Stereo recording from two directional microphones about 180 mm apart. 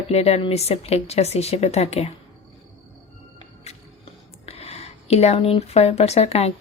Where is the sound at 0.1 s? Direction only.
35° left (ahead or behind).